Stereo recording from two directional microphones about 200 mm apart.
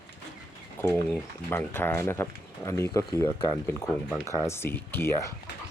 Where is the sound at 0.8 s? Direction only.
15° left (ahead or behind).